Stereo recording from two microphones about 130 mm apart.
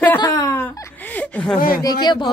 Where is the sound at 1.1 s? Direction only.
10° left (ahead or behind).